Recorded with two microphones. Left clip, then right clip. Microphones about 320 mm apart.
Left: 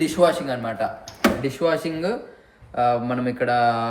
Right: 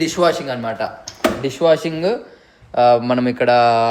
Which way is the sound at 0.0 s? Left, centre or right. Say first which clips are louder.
Right 2 dB; centre.